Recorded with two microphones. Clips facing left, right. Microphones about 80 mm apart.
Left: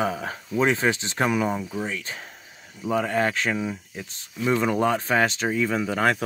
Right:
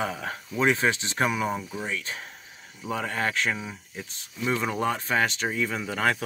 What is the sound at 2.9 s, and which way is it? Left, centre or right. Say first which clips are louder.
Speech: left 5 dB; left.